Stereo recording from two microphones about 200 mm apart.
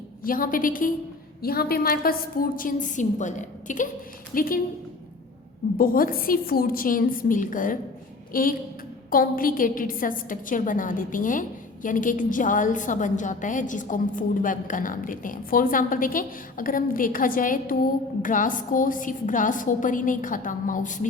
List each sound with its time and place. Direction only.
0.3 s a woman's voice: 45° left (ahead or behind)
5.7 s a woman's voice: 45° left (ahead or behind)